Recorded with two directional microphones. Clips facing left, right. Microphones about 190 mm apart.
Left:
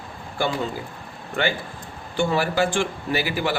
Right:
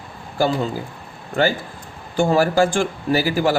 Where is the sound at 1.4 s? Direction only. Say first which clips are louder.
Right 5 dB; 40° right (ahead or behind).